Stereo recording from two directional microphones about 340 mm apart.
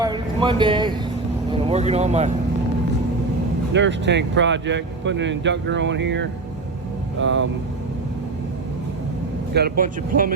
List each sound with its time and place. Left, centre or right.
0.0 s a sound: centre
1.5 s speech: centre
3.7 s speech: right
9.6 s speech: right